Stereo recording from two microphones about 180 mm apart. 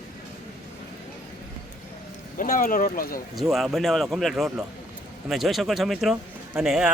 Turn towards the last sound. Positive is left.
turn(degrees=-5)  # may be behind; listen again after turning